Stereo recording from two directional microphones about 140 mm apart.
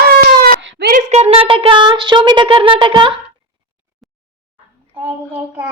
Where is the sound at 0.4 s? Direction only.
90° right.